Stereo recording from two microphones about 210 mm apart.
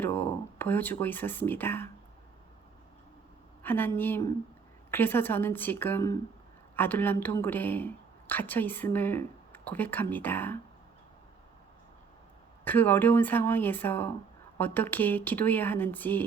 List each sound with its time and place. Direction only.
0.0 s speech: 10° left (ahead or behind)
3.6 s speech: 10° left (ahead or behind)
12.6 s speech: 10° left (ahead or behind)